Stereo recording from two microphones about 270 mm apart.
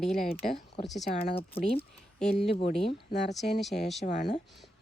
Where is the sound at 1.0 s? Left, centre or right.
Left.